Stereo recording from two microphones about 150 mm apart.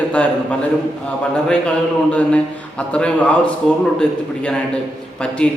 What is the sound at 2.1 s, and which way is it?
A man's voice, 10° left (ahead or behind).